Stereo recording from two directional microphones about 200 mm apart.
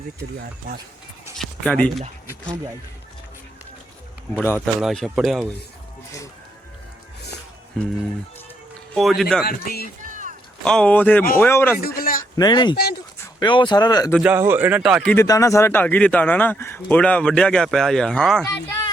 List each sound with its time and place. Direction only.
1.4 s speech: 5° left (ahead or behind)
4.5 s speech: centre (ahead or behind)
9.0 s speech: centre (ahead or behind)
9.4 s speech: 50° left (ahead or behind)
10.0 s a sound: 40° right (ahead or behind)
10.6 s speech: 5° left (ahead or behind)
11.8 s a man's voice: 45° left (ahead or behind)
12.4 s speech: 20° left (ahead or behind)
12.7 s speech: 50° left (ahead or behind)
13.4 s speech: 25° left (ahead or behind)
14.2 s speech: 10° right (ahead or behind)
15.1 s speech: 15° left (ahead or behind)